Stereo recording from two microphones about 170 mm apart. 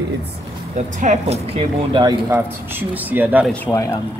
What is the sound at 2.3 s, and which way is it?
Speech, 10° right (ahead or behind).